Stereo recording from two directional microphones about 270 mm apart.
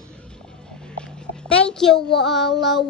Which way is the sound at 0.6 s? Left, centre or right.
Centre.